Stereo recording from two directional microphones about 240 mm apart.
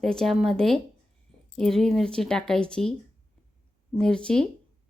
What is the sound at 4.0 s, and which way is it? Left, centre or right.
Speech, centre.